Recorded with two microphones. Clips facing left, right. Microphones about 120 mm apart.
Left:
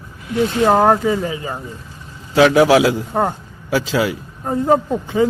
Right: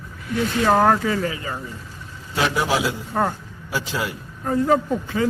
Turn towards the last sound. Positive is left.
turn(degrees=20)  # may be behind; listen again after turning